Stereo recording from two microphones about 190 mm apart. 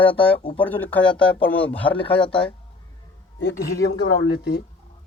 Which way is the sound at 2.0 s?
25° left (ahead or behind).